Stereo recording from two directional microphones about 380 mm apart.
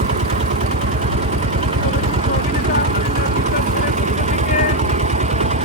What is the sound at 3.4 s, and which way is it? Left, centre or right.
Vehicle, centre.